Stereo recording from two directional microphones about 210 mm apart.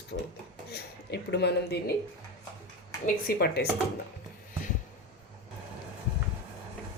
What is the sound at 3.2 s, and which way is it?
Speech, 50° left (ahead or behind).